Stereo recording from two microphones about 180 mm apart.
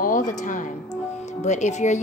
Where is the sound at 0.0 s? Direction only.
45° left (ahead or behind).